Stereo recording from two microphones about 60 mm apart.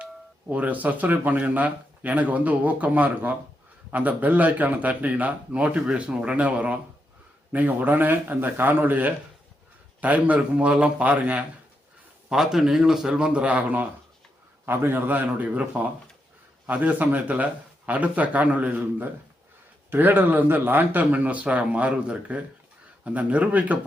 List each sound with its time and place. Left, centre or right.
0.0 s a man's voice: right
12.3 s speech: centre; by 13.8 s right
14.7 s a man's voice: right